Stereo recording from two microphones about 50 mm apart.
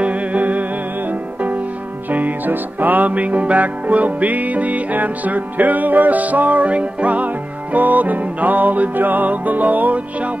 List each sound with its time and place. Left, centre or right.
0.0 s music: right